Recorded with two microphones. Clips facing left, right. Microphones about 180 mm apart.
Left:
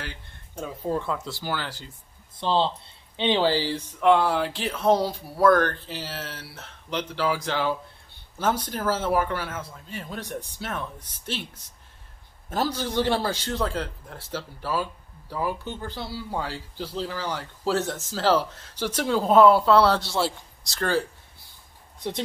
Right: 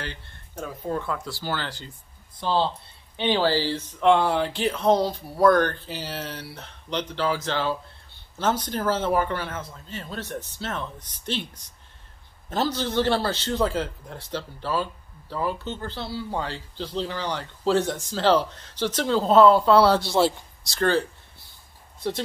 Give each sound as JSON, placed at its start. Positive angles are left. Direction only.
{"t": 0.0, "sound": "a sound", "side_deg": 10}
{"t": 0.8, "sound": "speech", "side_deg": 25}
{"t": 2.3, "sound": "speech", "side_deg": 25}
{"t": 13.5, "sound": "speech", "side_deg": 0}
{"t": 19.6, "sound": "speech", "side_deg": 0}
{"t": 20.0, "sound": "speech", "side_deg": -20}
{"t": 20.6, "sound": "speech", "side_deg": 5}